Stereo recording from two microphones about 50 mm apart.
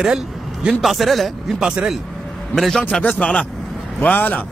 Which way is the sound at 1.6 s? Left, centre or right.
Centre.